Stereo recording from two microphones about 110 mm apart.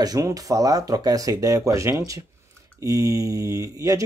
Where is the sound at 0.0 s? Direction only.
35° right (ahead or behind).